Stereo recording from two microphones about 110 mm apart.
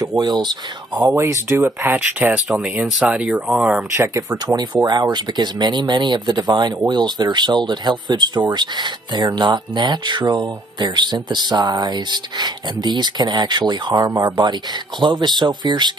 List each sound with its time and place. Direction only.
0.0 s speech: 35° right (ahead or behind)
0.9 s speech: 30° right (ahead or behind)
2.4 s speech: 5° right (ahead or behind)
3.9 s speech: 25° right (ahead or behind); by 15.9 s 40° right (ahead or behind)